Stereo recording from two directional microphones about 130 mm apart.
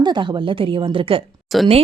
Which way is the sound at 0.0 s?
35° right (ahead or behind).